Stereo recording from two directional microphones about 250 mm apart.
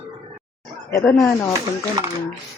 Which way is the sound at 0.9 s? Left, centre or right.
Centre.